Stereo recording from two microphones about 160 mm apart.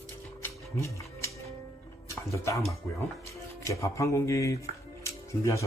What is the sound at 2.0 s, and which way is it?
Speech, 20° left (ahead or behind).